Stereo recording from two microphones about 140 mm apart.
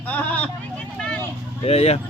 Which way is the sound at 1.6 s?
45° left (ahead or behind).